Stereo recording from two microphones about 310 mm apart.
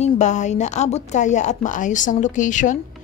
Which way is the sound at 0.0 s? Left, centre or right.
Left.